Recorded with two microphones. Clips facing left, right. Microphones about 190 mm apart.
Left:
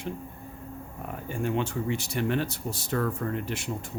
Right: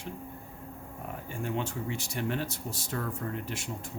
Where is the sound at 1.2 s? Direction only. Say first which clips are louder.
Left 5 dB; 75° left (ahead or behind).